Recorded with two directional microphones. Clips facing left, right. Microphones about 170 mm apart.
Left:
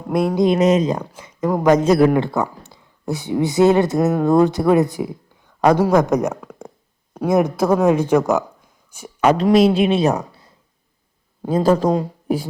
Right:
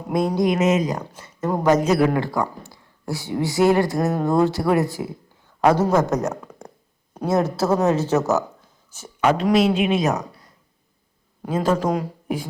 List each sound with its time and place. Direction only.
0.1 s speech: centre (ahead or behind)
0.3 s speech: 30° left (ahead or behind)
1.1 s a sound: 10° left (ahead or behind)
1.8 s a man's voice: 35° left (ahead or behind)
2.1 s speech: 25° left (ahead or behind)
9.2 s a man's voice: 40° left (ahead or behind)